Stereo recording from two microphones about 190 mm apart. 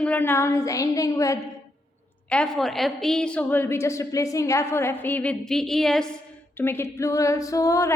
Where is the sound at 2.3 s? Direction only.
5° left (ahead or behind).